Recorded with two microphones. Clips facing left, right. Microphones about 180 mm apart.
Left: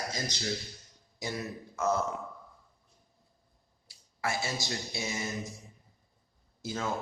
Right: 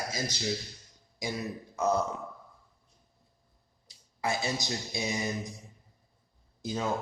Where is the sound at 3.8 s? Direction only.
20° right (ahead or behind).